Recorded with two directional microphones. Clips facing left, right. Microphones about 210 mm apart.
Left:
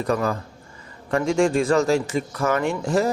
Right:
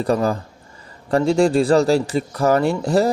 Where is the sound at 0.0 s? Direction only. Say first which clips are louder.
Right 4 dB; 30° right (ahead or behind).